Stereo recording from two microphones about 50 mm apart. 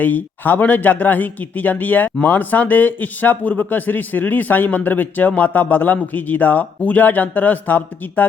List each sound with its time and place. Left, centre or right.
0.0 s a man's voice: left